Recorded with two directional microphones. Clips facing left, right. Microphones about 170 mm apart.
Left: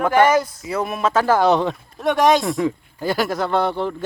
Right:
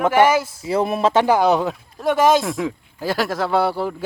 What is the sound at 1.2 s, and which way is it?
Speech, 10° right (ahead or behind).